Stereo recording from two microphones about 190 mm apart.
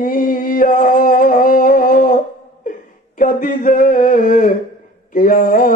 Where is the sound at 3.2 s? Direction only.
45° left (ahead or behind).